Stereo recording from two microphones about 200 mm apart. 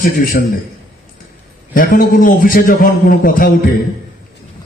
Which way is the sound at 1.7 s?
45° left (ahead or behind).